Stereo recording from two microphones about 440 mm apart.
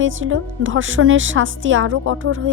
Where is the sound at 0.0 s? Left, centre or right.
Right.